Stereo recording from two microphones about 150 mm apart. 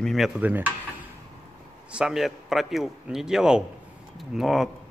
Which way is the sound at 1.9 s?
5° right (ahead or behind).